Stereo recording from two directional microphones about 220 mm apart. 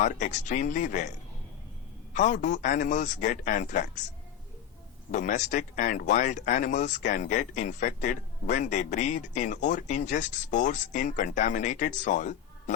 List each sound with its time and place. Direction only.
0.0 s speech: 35° left (ahead or behind)
2.1 s speech: 35° left (ahead or behind)
5.1 s speech: 35° left (ahead or behind)